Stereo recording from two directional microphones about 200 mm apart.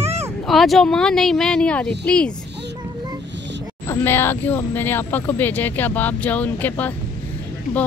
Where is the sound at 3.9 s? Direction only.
10° left (ahead or behind).